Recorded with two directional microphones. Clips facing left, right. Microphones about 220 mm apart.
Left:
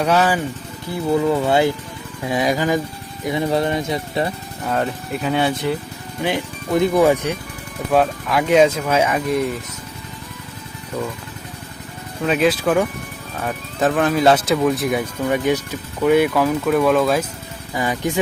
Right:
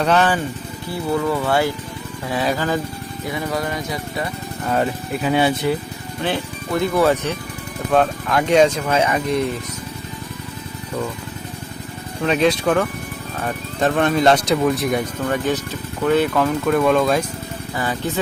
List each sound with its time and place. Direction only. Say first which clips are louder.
0.0 s speech: even; 10° left (ahead or behind)
1.1 s speech: left 3 dB; 20° left (ahead or behind)
4.6 s speech: right 1 dB; 5° right (ahead or behind)
6.2 s speech: left 1 dB; 15° left (ahead or behind)
12.2 s speech: even; 5° left (ahead or behind)
17.7 s speech: left 2 dB; 15° left (ahead or behind)